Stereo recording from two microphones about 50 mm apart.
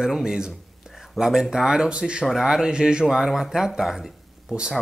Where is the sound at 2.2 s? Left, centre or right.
Centre.